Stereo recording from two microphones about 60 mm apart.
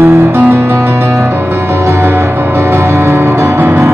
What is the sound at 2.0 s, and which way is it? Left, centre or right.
Music, right.